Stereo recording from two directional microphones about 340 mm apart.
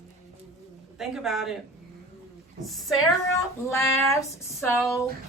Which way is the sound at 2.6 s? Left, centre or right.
Centre.